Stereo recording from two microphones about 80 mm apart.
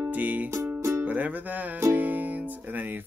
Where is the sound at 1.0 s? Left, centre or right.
Centre.